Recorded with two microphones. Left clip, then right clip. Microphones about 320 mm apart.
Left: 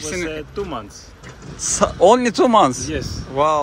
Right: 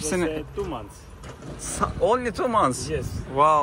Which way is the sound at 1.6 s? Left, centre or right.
Centre.